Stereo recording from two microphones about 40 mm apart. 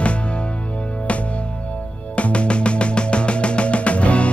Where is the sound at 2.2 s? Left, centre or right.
Left.